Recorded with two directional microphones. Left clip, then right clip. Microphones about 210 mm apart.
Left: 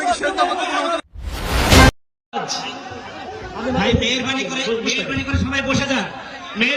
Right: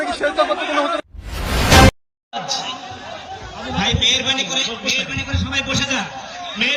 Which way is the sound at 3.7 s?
25° left (ahead or behind).